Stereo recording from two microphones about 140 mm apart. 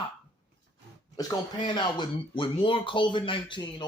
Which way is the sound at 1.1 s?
30° left (ahead or behind).